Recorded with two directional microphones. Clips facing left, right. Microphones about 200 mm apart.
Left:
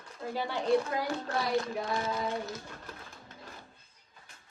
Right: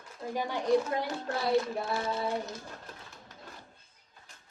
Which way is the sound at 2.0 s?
30° right (ahead or behind).